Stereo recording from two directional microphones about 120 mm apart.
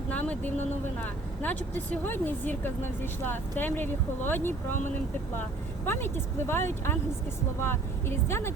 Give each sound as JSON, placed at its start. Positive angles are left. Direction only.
{"t": 0.1, "sound": "speech", "side_deg": 10}
{"t": 5.8, "sound": "speech", "side_deg": 20}